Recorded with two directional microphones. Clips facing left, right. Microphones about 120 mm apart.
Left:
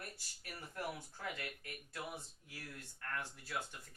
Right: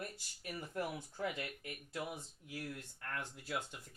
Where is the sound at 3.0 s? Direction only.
20° right (ahead or behind).